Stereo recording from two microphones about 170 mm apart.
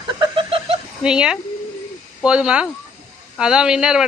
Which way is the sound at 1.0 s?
5° right (ahead or behind).